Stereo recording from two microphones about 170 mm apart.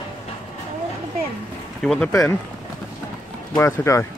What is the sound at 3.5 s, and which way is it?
Speech, 15° left (ahead or behind).